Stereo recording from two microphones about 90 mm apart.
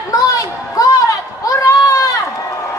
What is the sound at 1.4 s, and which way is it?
Run, 40° left (ahead or behind).